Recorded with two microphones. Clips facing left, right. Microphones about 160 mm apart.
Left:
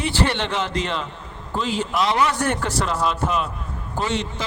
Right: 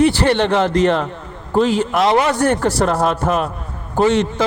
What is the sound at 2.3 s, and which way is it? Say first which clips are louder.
Speech: right 7 dB; 35° right (ahead or behind).